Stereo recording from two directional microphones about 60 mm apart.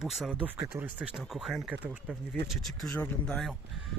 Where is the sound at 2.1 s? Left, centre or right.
Right.